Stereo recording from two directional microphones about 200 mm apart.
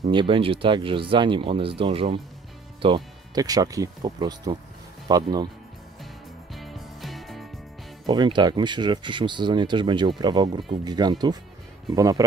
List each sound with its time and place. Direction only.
0.1 s speech: 25° right (ahead or behind)
6.5 s music: centre (ahead or behind)
8.1 s speech: 20° right (ahead or behind)